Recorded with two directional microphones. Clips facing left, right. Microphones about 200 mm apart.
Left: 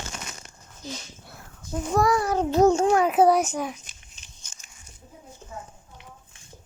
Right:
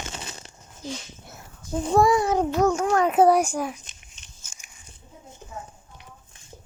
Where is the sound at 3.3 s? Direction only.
10° right (ahead or behind).